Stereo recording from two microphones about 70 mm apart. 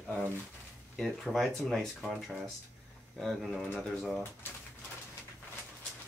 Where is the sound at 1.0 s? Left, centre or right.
Centre.